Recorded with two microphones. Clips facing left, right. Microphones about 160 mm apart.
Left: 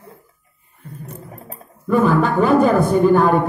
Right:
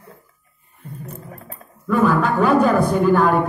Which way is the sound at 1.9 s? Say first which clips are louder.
Left 1 dB; 40° left (ahead or behind).